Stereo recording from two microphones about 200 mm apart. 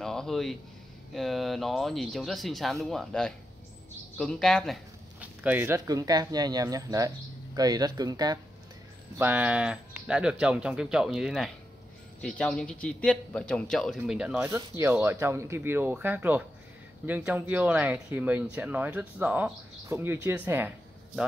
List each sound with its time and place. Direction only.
0.0 s a sound: centre (ahead or behind)
1.1 s a man's voice: centre (ahead or behind); by 8.4 s 20° right (ahead or behind)
9.2 s a man's voice: 5° right (ahead or behind)